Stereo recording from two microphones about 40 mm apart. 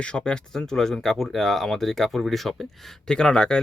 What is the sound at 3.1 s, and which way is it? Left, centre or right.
Speech, centre.